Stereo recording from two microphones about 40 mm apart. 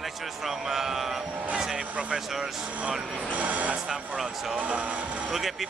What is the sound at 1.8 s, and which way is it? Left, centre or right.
Speech, right.